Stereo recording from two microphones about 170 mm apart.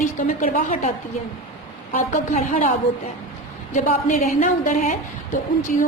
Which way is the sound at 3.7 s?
45° left (ahead or behind).